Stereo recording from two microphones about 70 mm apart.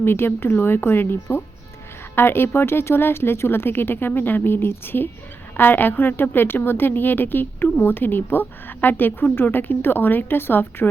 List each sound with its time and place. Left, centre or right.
0.0 s a woman's voice: left